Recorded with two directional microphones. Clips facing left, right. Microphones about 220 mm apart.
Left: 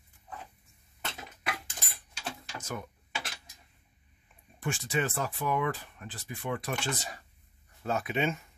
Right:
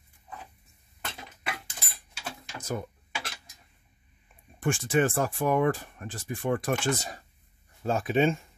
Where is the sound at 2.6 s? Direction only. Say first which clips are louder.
Right 7 dB; 35° right (ahead or behind).